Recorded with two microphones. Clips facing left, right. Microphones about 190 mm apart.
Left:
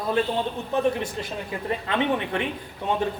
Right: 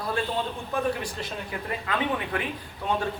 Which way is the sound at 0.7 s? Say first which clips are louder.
Left 5 dB; 25° left (ahead or behind).